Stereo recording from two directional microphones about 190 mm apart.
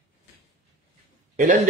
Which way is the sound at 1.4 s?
40° right (ahead or behind).